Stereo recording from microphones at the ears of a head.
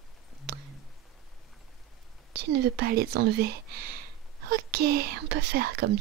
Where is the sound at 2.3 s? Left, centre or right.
Right.